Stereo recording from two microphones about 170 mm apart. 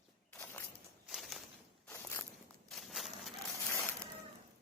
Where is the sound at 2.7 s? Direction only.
Centre (ahead or behind).